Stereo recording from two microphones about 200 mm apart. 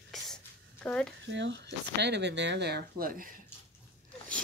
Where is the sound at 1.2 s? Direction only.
60° right (ahead or behind); by 3.3 s 45° right (ahead or behind).